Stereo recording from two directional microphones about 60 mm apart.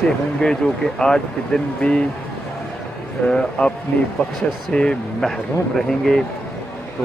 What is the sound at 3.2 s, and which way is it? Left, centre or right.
Speech, left.